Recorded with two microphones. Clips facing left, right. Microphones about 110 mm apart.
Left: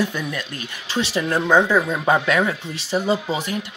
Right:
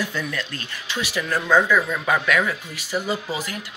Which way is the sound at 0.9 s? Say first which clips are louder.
Left 4 dB; 30° left (ahead or behind).